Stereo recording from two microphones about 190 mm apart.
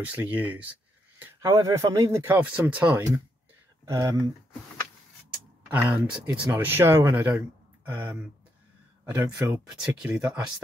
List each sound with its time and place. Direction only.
0.0 s speech: 10° right (ahead or behind)
5.7 s speech: 10° right (ahead or behind)